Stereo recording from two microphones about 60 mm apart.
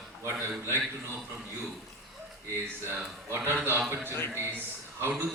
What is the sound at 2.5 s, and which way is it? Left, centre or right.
Speech, right.